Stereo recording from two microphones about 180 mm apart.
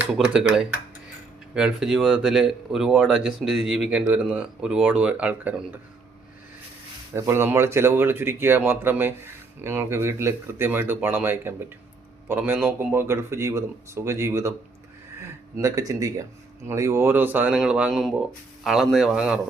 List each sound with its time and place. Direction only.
0.0 s speech: 5° right (ahead or behind)
7.1 s speech: 15° right (ahead or behind)